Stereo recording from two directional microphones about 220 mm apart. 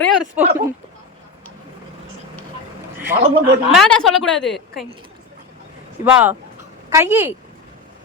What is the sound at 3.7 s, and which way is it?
A woman's voice, centre (ahead or behind).